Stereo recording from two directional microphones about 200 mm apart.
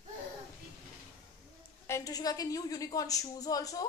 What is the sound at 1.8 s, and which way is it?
A woman's voice, 15° left (ahead or behind).